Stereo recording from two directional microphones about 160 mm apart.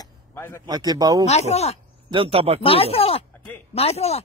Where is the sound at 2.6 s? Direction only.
35° left (ahead or behind).